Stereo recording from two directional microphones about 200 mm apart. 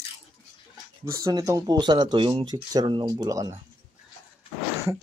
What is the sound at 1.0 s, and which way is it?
Speech, 15° right (ahead or behind).